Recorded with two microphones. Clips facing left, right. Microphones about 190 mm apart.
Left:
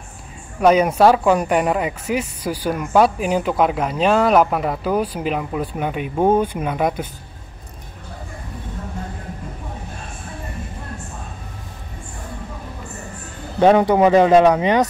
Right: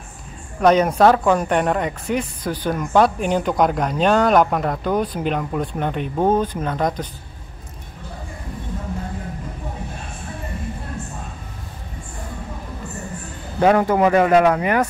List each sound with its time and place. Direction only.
0.6 s speech: 10° left (ahead or behind)
13.7 s speech: 20° left (ahead or behind)